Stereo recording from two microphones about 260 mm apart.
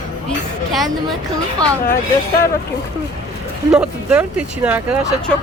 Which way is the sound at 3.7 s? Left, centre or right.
Centre.